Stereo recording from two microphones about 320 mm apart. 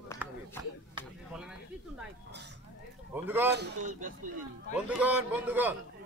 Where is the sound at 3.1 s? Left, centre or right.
Centre.